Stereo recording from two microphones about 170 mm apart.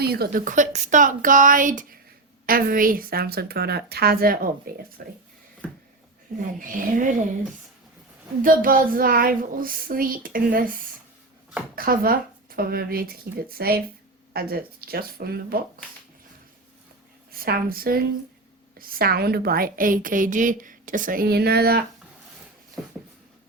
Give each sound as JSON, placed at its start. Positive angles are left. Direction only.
{"t": 0.0, "sound": "a woman's voice", "side_deg": -65}
{"t": 5.6, "sound": "a sound", "side_deg": 5}
{"t": 6.6, "sound": "a woman's voice", "side_deg": -50}
{"t": 8.4, "sound": "a woman's voice", "side_deg": -55}
{"t": 11.7, "sound": "a woman's voice", "side_deg": -60}
{"t": 17.3, "sound": "a woman's voice", "side_deg": -60}